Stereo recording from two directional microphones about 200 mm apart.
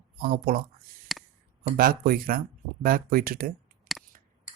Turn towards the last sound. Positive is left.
turn(degrees=0)  # may be behind; listen again after turning